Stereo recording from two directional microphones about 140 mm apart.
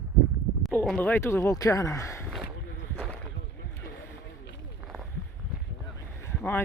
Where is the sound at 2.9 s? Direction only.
10° left (ahead or behind).